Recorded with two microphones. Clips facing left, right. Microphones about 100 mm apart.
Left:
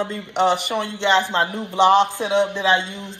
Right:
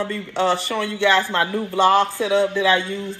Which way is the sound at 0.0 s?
20° left (ahead or behind).